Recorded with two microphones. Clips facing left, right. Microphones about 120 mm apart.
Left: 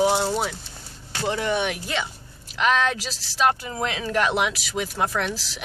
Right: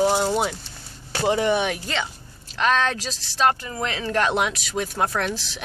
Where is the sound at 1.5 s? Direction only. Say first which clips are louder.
Right 1 dB; 5° left (ahead or behind).